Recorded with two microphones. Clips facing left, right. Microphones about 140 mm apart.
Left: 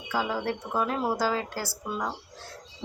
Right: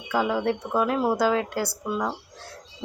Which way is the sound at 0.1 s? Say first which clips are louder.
Right 5 dB; 5° left (ahead or behind).